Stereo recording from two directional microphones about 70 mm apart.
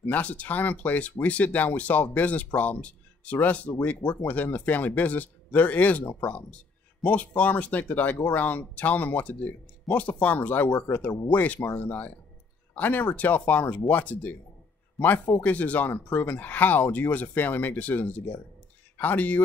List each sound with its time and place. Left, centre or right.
0.0 s speech: left